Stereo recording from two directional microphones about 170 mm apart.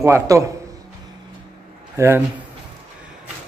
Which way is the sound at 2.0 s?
15° right (ahead or behind).